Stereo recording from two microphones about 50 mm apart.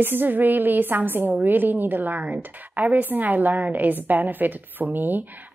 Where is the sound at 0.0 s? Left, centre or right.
Right.